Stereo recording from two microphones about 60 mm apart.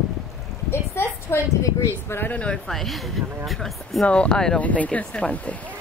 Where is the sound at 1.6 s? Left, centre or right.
Left.